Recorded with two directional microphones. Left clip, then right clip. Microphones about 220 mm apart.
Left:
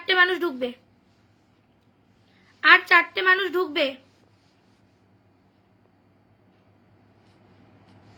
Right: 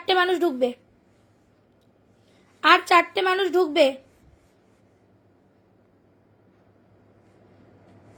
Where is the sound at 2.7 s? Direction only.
30° right (ahead or behind).